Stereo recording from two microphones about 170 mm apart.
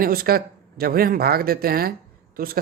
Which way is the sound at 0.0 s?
60° right (ahead or behind).